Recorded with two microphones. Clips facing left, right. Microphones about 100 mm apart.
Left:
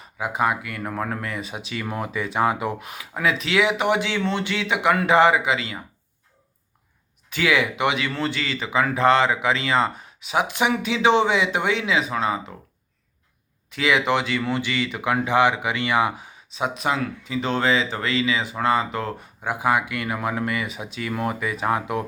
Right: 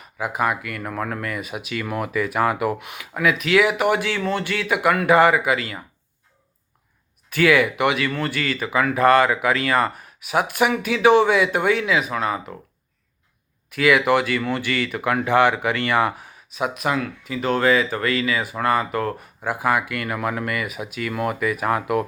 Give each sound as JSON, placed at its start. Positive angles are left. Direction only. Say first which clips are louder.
{"t": 0.0, "sound": "speech", "louder": "even", "side_deg": 25}
{"t": 7.3, "sound": "speech", "louder": "right 4 dB", "side_deg": 20}
{"t": 13.7, "sound": "speech", "louder": "right 4 dB", "side_deg": 25}